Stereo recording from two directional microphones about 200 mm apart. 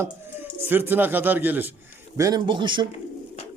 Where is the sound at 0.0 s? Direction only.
10° right (ahead or behind).